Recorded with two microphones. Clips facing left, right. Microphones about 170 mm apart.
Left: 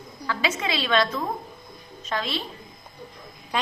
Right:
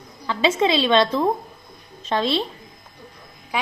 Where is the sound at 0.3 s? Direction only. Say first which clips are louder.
Right 8 dB; 25° right (ahead or behind).